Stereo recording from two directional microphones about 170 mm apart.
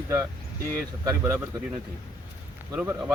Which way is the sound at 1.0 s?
15° right (ahead or behind).